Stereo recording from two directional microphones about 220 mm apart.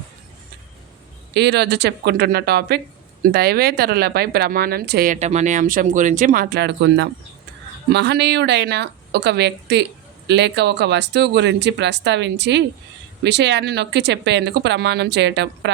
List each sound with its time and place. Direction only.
1.3 s speech: 50° right (ahead or behind)